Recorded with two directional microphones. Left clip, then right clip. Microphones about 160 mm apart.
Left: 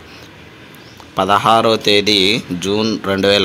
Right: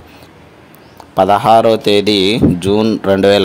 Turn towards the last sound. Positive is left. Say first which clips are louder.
# right 4 dB
turn(degrees=-45)  # may be behind; listen again after turning